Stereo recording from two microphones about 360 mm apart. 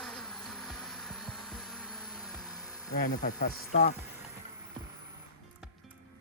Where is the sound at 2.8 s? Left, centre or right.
Left.